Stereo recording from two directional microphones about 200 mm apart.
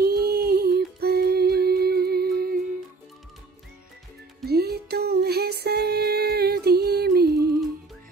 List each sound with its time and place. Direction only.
0.0 s music: 50° right (ahead or behind)
4.5 s music: 50° right (ahead or behind)